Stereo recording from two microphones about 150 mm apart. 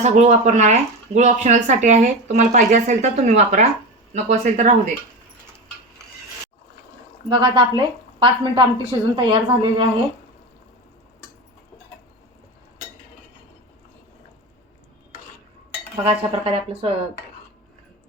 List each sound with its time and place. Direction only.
0.0 s speech: 50° right (ahead or behind)
7.3 s a woman's voice: 35° right (ahead or behind)
16.0 s a woman's voice: 40° right (ahead or behind)